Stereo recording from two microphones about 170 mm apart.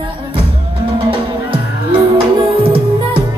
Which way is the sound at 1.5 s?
30° right (ahead or behind).